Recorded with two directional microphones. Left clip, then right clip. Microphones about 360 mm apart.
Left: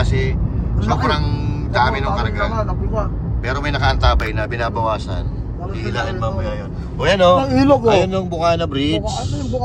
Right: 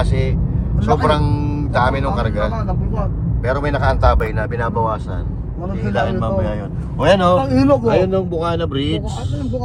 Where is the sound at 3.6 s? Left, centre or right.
Centre.